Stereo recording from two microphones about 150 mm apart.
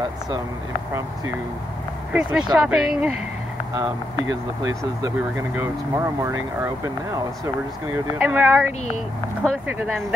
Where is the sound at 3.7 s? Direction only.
20° right (ahead or behind).